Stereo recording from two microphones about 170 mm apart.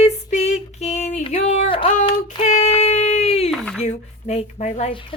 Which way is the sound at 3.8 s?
40° left (ahead or behind).